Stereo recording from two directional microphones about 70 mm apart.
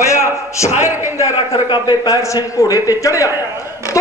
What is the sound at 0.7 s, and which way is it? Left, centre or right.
Speech, right.